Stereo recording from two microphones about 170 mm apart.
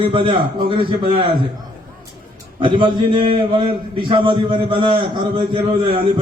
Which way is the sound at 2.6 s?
30° right (ahead or behind).